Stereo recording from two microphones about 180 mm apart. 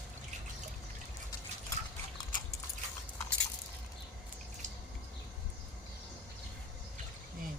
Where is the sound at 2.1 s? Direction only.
25° left (ahead or behind).